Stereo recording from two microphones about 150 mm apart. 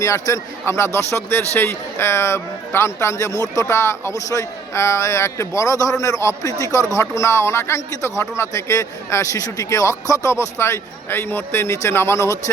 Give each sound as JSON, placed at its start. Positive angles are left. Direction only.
{"t": 0.0, "sound": "a man's voice", "side_deg": 20}